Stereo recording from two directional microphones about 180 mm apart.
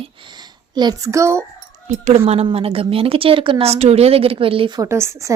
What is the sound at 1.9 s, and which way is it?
A woman's voice, 40° right (ahead or behind).